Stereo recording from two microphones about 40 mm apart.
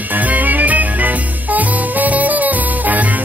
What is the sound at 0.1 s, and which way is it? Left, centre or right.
Music, right.